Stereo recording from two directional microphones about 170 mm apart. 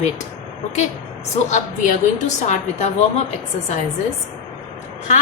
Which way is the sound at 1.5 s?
45° left (ahead or behind).